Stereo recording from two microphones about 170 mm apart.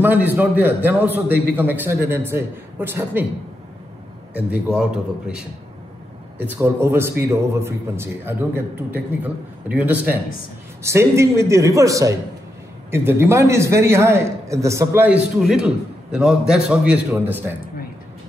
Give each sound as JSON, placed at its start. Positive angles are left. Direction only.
{"t": 0.0, "sound": "a man's voice", "side_deg": -10}
{"t": 4.5, "sound": "a man's voice", "side_deg": -5}